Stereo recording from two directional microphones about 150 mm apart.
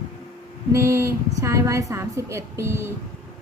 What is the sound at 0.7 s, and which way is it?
A woman's voice, 20° right (ahead or behind).